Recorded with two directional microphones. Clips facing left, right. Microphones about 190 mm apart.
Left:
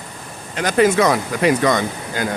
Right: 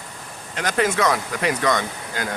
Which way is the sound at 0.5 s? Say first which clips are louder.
Left 6 dB; 10° left (ahead or behind).